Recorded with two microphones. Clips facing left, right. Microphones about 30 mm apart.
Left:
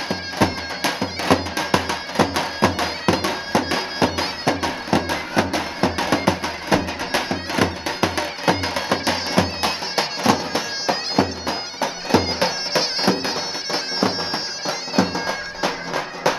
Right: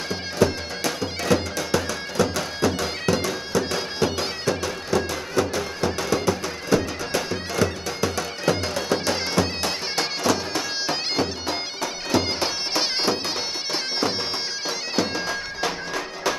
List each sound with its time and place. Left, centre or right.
0.1 s music: left
12.4 s bagpipes: centre
14.7 s bagpipes: centre